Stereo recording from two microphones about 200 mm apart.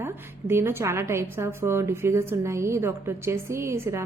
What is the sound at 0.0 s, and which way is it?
Speech, 10° right (ahead or behind).